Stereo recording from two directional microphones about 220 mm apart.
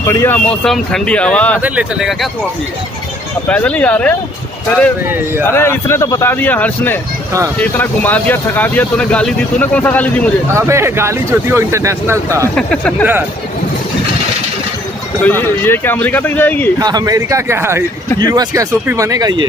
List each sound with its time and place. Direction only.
0.0 s speech: 10° left (ahead or behind)
1.6 s speech: 5° right (ahead or behind)
3.4 s speech: 5° left (ahead or behind)
5.4 s speech: 10° left (ahead or behind)
10.5 s speech: 10° right (ahead or behind)
12.5 s speech: 5° left (ahead or behind)
15.2 s speech: 10° left (ahead or behind)
16.7 s speech: 15° right (ahead or behind)